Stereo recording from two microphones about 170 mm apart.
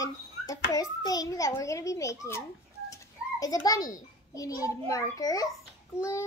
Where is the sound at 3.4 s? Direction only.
20° left (ahead or behind).